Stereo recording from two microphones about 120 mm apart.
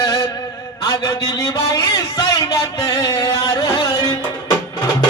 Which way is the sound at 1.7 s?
30° left (ahead or behind).